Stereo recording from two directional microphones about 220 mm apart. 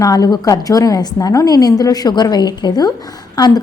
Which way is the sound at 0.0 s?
15° left (ahead or behind).